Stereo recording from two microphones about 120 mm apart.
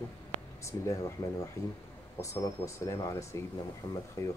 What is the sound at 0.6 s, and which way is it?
Speech, 25° left (ahead or behind).